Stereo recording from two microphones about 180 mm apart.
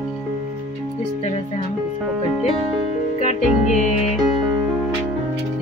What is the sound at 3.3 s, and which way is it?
Music, 40° left (ahead or behind).